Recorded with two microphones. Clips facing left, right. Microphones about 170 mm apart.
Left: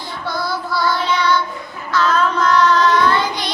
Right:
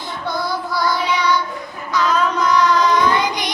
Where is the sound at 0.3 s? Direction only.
20° right (ahead or behind).